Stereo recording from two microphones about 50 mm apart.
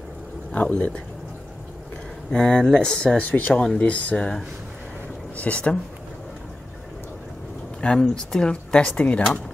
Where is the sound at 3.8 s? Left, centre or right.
Left.